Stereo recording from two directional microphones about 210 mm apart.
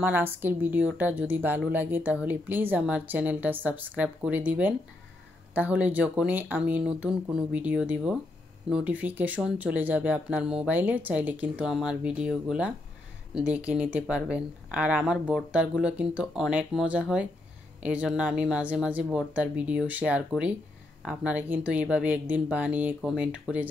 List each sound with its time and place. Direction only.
0.0 s speech: 10° right (ahead or behind)